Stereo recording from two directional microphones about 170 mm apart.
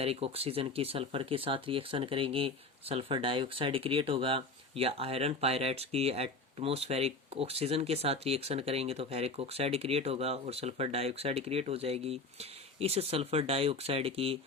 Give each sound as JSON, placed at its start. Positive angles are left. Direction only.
{"t": 0.0, "sound": "speech", "side_deg": -35}